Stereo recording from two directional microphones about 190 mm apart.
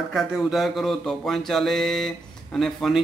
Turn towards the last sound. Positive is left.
turn(degrees=0)  # may be behind; listen again after turning